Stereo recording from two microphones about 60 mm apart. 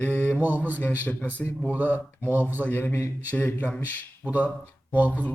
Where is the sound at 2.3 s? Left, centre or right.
Right.